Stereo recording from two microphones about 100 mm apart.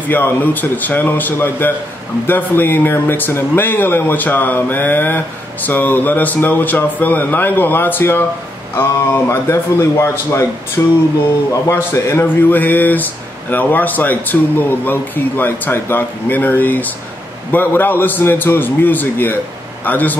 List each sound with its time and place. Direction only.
0.1 s a man's voice: 20° left (ahead or behind)